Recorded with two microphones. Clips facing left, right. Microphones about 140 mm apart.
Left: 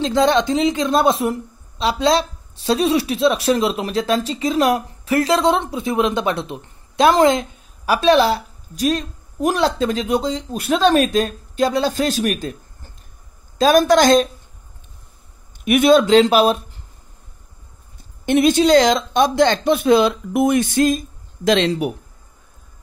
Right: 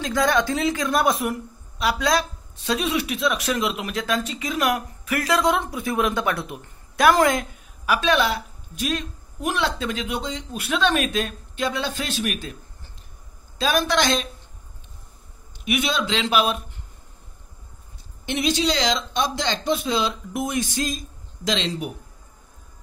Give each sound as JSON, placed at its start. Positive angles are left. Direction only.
{"t": 0.0, "sound": "a woman's voice", "side_deg": 25}
{"t": 13.6, "sound": "speech", "side_deg": 45}
{"t": 15.6, "sound": "speech", "side_deg": 50}
{"t": 18.2, "sound": "speech", "side_deg": 50}